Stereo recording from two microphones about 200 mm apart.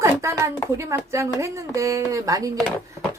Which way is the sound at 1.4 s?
15° right (ahead or behind).